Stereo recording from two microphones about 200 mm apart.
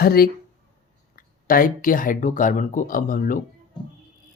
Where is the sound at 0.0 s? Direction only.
50° left (ahead or behind).